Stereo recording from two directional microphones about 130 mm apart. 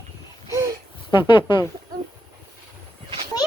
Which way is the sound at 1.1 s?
40° left (ahead or behind).